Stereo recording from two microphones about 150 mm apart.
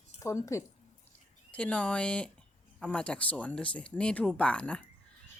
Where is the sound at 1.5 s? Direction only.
5° left (ahead or behind).